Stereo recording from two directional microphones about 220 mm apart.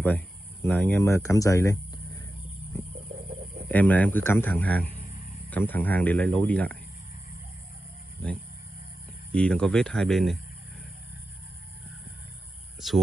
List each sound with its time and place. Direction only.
0.0 s speech: 10° left (ahead or behind)
3.2 s a sound: 30° right (ahead or behind)
3.6 s speech: 10° left (ahead or behind)
9.3 s speech: 5° left (ahead or behind)